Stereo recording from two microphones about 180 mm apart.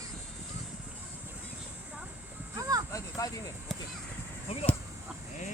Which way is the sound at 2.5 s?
20° right (ahead or behind).